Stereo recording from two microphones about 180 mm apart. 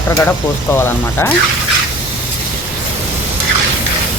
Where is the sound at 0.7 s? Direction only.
10° left (ahead or behind).